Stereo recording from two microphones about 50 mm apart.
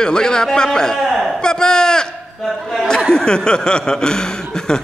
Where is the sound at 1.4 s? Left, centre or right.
Centre.